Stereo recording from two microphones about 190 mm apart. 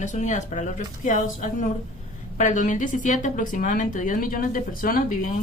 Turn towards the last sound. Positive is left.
turn(degrees=45)  # may be behind; listen again after turning